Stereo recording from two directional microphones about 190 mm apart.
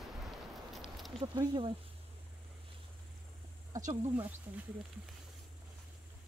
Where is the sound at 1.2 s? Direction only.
25° right (ahead or behind).